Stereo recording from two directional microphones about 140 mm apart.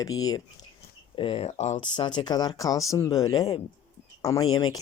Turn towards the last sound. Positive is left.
turn(degrees=25)  # may be behind; listen again after turning